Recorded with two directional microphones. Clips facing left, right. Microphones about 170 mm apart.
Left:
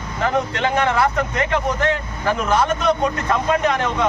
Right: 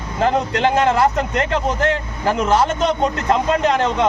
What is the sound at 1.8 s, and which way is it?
Speech, 30° right (ahead or behind).